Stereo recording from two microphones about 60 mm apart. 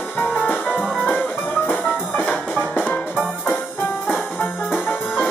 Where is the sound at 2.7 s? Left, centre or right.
Left.